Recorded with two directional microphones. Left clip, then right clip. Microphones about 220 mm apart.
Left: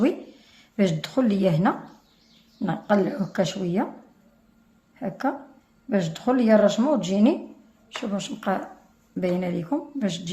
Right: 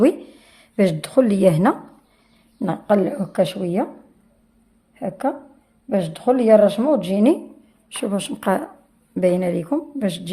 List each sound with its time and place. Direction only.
0.0 s speech: 40° right (ahead or behind)
4.9 s a woman's voice: 30° right (ahead or behind)
7.9 s a woman's voice: 45° right (ahead or behind)